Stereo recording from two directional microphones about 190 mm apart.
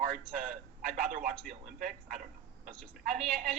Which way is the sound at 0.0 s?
45° right (ahead or behind).